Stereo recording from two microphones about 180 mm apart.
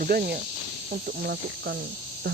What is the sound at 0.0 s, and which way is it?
Speech, 55° right (ahead or behind).